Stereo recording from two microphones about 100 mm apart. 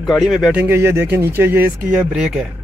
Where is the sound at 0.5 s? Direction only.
25° right (ahead or behind).